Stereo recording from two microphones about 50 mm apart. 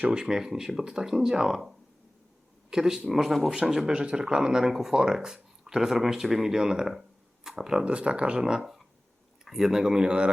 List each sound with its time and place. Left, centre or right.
0.1 s speech: centre
3.5 s speech: centre
7.9 s speech: right